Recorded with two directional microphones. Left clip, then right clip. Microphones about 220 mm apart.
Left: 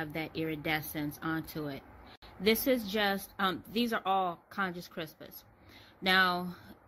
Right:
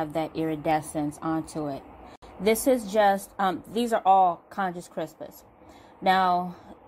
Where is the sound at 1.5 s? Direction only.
15° left (ahead or behind).